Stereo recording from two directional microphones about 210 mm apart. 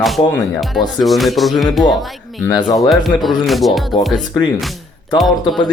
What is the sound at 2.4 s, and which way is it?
Speech, 15° left (ahead or behind).